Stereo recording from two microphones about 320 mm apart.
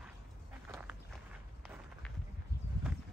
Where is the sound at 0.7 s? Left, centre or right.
Centre.